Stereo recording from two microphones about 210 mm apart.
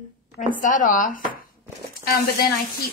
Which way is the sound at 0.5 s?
40° left (ahead or behind).